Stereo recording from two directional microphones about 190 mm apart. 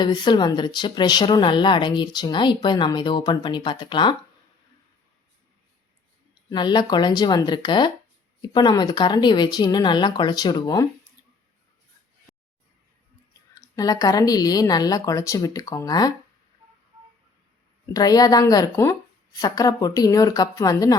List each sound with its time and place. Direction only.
0.0 s speech: 25° left (ahead or behind)
6.5 s speech: 25° left (ahead or behind)
13.5 s speech: 20° left (ahead or behind)
17.8 s speech: 20° left (ahead or behind)